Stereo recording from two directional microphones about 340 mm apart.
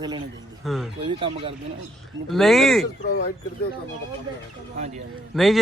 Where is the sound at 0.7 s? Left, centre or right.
Centre.